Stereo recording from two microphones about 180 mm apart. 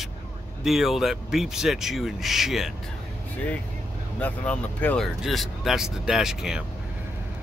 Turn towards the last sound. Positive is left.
turn(degrees=-5)  # may be behind; listen again after turning